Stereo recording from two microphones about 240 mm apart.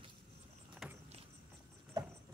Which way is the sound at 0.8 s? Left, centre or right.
Centre.